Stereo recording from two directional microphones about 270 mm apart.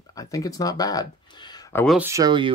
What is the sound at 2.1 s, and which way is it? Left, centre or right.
Speech, centre.